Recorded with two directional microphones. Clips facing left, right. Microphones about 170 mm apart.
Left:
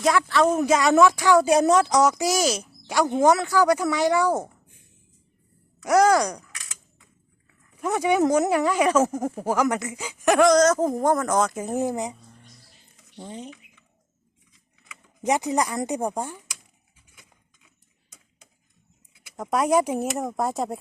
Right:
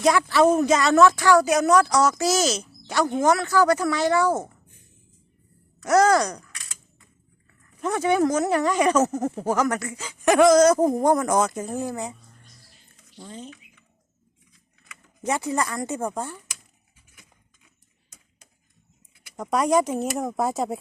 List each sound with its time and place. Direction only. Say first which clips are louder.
0.0 s speech: right 2 dB; centre (ahead or behind)
0.6 s speech: even; 10° left (ahead or behind)
1.5 s speech: left 1 dB; 30° left (ahead or behind); by 4.5 s 15° left (ahead or behind)
5.8 s speech: even; 10° left (ahead or behind)
7.8 s speech: even; 10° left (ahead or behind)
10.2 s speech: right 2 dB; centre (ahead or behind)
11.5 s speech: left 3 dB; 15° left (ahead or behind)
13.1 s speech: left 2 dB; 15° left (ahead or behind)
15.2 s speech: left 2 dB; 15° left (ahead or behind)
19.4 s speech: even; centre (ahead or behind)